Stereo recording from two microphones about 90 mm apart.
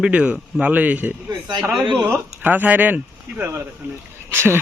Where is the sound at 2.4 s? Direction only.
20° right (ahead or behind).